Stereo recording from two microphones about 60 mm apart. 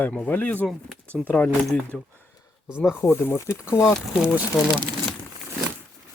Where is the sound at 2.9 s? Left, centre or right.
Left.